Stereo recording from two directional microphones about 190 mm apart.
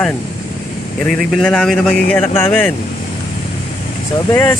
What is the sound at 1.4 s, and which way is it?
A man's voice, centre (ahead or behind).